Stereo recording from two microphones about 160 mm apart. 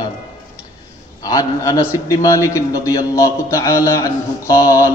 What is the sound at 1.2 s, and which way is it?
A man's voice, 20° left (ahead or behind).